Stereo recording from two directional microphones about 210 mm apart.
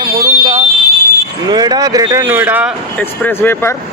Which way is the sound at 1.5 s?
20° right (ahead or behind).